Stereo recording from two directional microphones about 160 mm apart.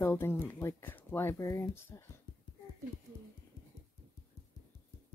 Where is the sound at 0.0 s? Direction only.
15° left (ahead or behind).